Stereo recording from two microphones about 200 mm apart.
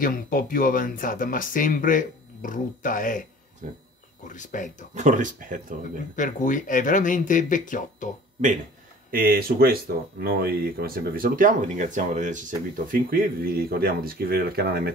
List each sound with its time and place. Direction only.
0.0 s speech: 45° left (ahead or behind)
3.6 s speech: 40° right (ahead or behind)
4.2 s speech: 40° left (ahead or behind)
4.9 s speech: 40° right (ahead or behind)
6.1 s speech: 40° left (ahead or behind)
9.1 s speech: 45° right (ahead or behind)